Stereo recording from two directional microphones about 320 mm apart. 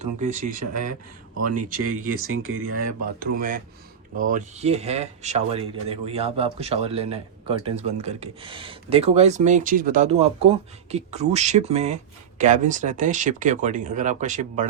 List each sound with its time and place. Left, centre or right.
0.0 s speech: right
0.6 s speech: right
3.2 s speech: right